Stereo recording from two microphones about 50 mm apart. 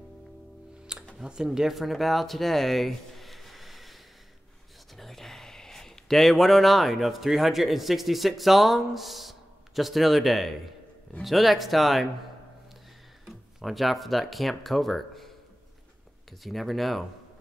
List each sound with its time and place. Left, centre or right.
0.9 s music: centre
1.2 s speech: centre
13.2 s speech: centre